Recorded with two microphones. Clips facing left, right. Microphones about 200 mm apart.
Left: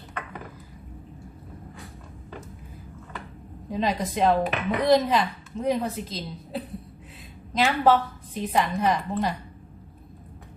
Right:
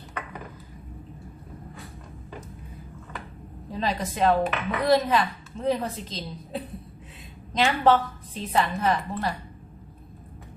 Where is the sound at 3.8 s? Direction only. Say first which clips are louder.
Left 1 dB; 20° left (ahead or behind).